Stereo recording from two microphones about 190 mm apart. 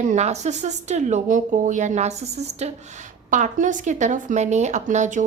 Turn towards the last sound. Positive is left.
turn(degrees=-40)  # may be behind; listen again after turning